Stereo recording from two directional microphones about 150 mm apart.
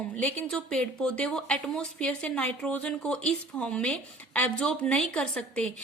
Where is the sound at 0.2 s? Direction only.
10° left (ahead or behind).